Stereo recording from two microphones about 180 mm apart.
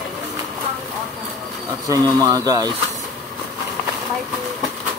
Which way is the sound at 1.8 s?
20° right (ahead or behind).